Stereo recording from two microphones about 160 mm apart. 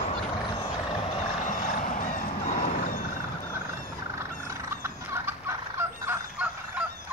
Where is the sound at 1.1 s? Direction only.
45° left (ahead or behind).